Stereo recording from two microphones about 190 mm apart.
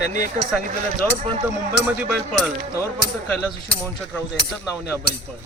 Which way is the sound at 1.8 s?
5° right (ahead or behind).